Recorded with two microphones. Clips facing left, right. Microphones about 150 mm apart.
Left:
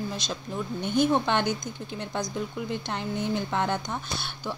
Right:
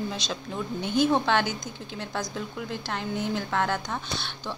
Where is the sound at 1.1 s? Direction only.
15° left (ahead or behind).